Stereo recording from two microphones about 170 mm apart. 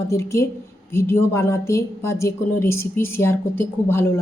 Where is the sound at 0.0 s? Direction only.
15° left (ahead or behind).